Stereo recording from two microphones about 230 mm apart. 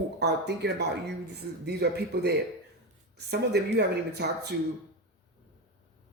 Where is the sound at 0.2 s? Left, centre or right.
Right.